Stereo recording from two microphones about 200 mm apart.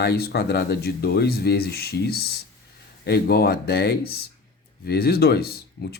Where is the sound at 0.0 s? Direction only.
55° left (ahead or behind).